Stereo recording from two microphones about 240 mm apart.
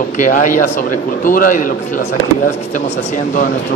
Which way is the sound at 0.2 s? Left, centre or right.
Left.